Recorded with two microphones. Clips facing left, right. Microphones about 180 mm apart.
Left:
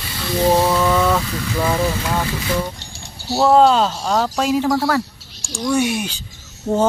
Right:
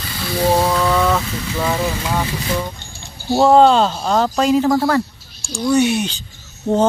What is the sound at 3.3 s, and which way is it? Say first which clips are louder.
Speech: right 2 dB; 5° left (ahead or behind).